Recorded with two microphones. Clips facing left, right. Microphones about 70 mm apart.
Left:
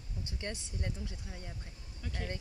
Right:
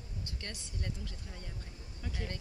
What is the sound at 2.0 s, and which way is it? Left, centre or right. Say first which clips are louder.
Speech: even; centre.